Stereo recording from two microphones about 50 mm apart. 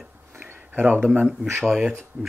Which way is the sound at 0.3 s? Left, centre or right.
Right.